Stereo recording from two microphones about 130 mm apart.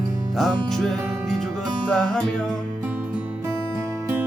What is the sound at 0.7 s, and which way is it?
Music, 5° left (ahead or behind).